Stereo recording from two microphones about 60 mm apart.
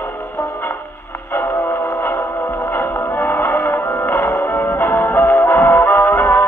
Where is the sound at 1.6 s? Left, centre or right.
Left.